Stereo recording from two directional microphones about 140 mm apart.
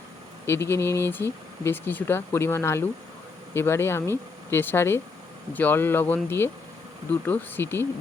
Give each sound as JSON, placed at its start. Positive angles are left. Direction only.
{"t": 0.4, "sound": "speech", "side_deg": 20}